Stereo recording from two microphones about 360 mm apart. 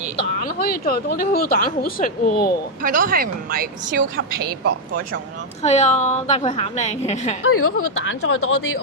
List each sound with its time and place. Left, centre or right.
0.2 s speech: left
2.8 s speech: right
5.6 s speech: centre
7.4 s speech: left